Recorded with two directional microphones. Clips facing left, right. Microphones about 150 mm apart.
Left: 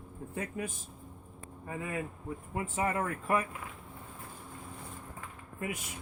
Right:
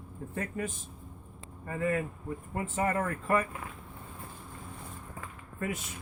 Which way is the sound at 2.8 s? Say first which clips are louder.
Right 2 dB; 10° left (ahead or behind).